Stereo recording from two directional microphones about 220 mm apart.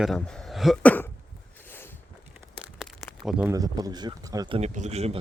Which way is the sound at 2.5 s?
Centre (ahead or behind).